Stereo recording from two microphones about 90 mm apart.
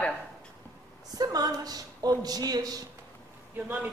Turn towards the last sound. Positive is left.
turn(degrees=-15)  # may be behind; listen again after turning